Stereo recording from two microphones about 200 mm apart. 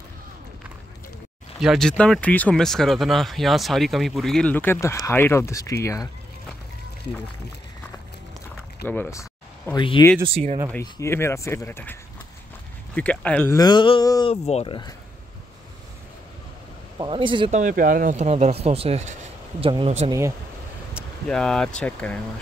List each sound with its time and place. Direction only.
1.6 s speech: centre (ahead or behind); by 6.0 s 15° left (ahead or behind)
8.8 s speech: 10° left (ahead or behind)
9.8 s a sound: 25° left (ahead or behind)
10.2 s speech: 30° right (ahead or behind)
10.8 s speech: 15° left (ahead or behind)
13.6 s a sound: 20° left (ahead or behind)
17.0 s speech: 25° right (ahead or behind)
17.6 s speech: 40° right (ahead or behind)
20.1 s speech: 15° right (ahead or behind)
20.9 s speech: 5° left (ahead or behind)